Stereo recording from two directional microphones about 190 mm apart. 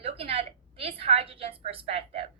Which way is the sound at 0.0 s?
30° right (ahead or behind).